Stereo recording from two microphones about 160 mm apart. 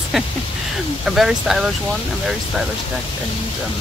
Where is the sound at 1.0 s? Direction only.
5° right (ahead or behind).